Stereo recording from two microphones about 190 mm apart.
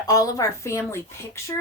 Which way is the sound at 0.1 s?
15° left (ahead or behind).